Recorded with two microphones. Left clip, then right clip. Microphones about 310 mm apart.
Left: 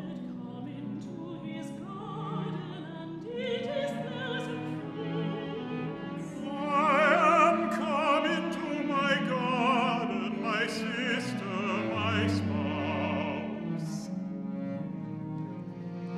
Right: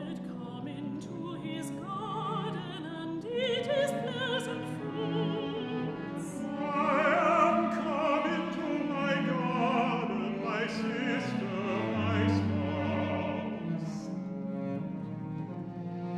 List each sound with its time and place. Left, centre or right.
3.3 s music: centre
6.7 s music: centre